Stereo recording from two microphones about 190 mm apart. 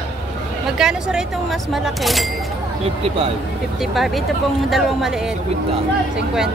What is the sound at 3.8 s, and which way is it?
Speech, centre (ahead or behind).